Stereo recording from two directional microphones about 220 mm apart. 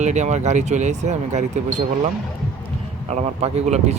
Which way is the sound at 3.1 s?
30° right (ahead or behind).